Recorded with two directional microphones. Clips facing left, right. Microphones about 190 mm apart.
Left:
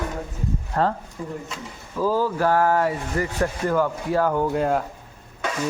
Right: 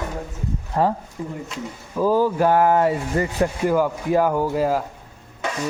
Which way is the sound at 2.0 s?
15° right (ahead or behind).